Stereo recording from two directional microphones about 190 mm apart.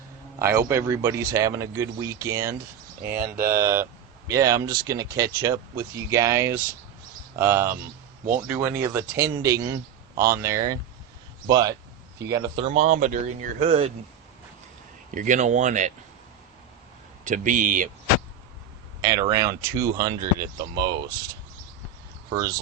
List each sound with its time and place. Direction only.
0.3 s a man's voice: 15° right (ahead or behind)
3.2 s speech: 50° right (ahead or behind)
3.4 s speech: 15° right (ahead or behind)
12.6 s speech: 35° right (ahead or behind)
15.1 s speech: 40° right (ahead or behind)
17.2 s speech: 40° right (ahead or behind)
19.0 s speech: 20° right (ahead or behind)
22.3 s speech: 20° right (ahead or behind)